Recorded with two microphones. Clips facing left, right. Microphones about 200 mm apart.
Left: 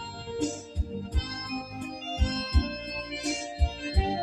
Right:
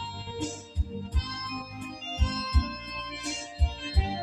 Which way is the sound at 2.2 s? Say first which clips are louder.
Left 2 dB; 35° left (ahead or behind).